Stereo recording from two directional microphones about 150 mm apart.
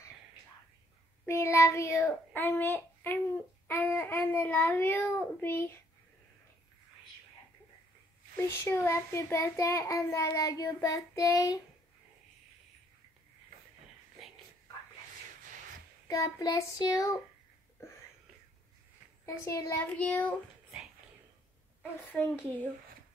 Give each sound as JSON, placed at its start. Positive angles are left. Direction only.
{"t": 1.2, "sound": "a child's voice", "side_deg": 20}
{"t": 8.4, "sound": "a child's voice", "side_deg": 15}
{"t": 16.1, "sound": "a child's voice", "side_deg": 25}
{"t": 19.2, "sound": "a child's voice", "side_deg": 20}
{"t": 19.8, "sound": "a child's voice", "side_deg": 10}
{"t": 22.0, "sound": "a child's voice", "side_deg": 10}